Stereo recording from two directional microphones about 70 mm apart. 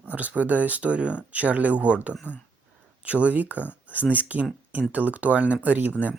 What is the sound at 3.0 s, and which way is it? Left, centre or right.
Speech, centre.